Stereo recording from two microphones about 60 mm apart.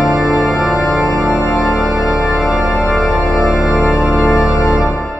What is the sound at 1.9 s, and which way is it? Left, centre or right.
Organ, centre.